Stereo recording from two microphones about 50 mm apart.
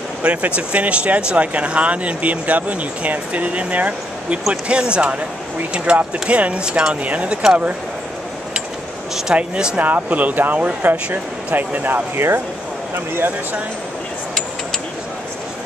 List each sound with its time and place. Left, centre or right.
0.2 s speech: right
9.3 s speech: right
9.8 s speech: right